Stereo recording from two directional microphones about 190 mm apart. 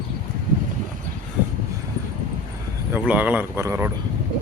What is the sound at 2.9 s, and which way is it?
Speech, 10° right (ahead or behind).